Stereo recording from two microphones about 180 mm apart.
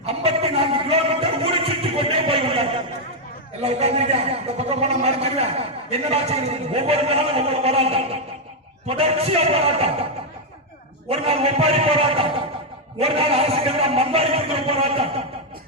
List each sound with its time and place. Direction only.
0.0 s a sound: 35° right (ahead or behind)
3.6 s a man's voice: 35° right (ahead or behind)
11.1 s a man's voice: 35° right (ahead or behind)